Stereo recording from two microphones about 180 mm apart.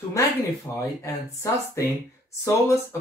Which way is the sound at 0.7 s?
15° left (ahead or behind).